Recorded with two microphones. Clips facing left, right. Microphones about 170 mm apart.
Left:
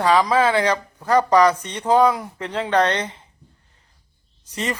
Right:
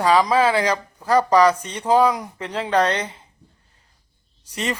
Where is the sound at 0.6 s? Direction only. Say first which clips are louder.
Left 1 dB; 10° right (ahead or behind).